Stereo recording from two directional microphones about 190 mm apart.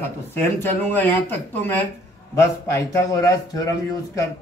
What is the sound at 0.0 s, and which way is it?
Speech, 10° left (ahead or behind).